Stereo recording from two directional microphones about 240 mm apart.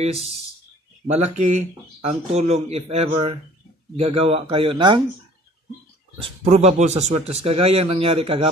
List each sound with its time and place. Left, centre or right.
0.0 s speech: right
6.2 s speech: right